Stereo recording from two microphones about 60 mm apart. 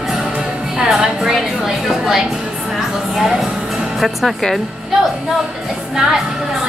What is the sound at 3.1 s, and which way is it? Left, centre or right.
Speech, centre.